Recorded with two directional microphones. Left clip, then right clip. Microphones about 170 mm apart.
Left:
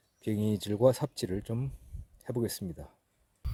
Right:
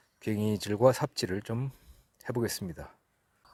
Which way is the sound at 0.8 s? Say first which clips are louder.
Right 2 dB; 10° left (ahead or behind).